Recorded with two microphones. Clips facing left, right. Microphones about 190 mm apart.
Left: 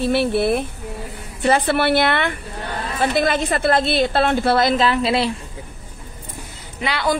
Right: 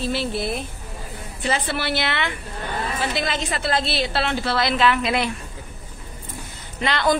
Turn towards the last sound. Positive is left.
turn(degrees=10)  # may be behind; listen again after turning